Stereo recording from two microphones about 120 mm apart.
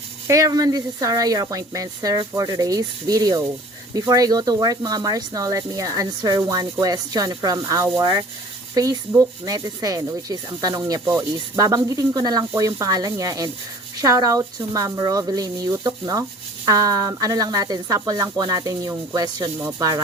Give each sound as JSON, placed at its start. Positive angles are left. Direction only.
{"t": 0.3, "sound": "speech", "side_deg": -30}